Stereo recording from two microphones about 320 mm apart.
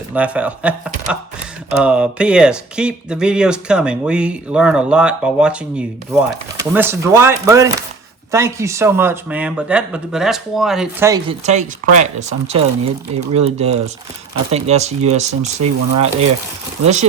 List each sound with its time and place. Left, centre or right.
0.1 s speech: centre; by 12.0 s right
13.1 s speech: centre